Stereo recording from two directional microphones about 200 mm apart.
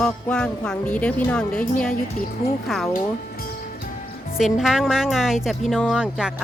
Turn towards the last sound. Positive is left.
turn(degrees=-5)  # may be behind; listen again after turning